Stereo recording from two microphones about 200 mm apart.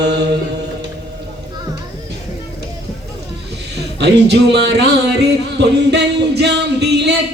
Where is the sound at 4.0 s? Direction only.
55° right (ahead or behind).